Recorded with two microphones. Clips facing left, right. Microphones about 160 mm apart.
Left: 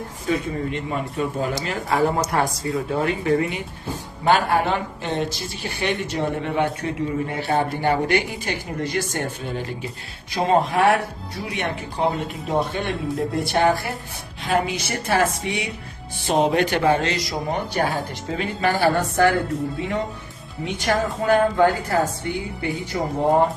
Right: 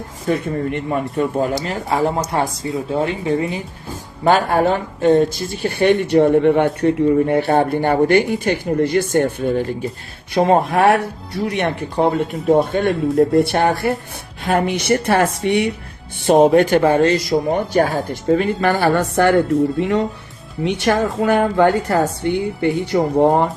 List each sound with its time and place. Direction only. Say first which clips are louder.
0.3 s speech: right 4 dB; 60° right (ahead or behind)
1.6 s speech: right 2 dB; 35° right (ahead or behind)
4.3 s speech: right 4 dB; 45° right (ahead or behind); by 15.7 s 65° right (ahead or behind)
16.2 s speech: right 8 dB; 50° right (ahead or behind)
18.8 s speech: even; 65° right (ahead or behind)
19.8 s a woman's voice: right 7 dB; 80° right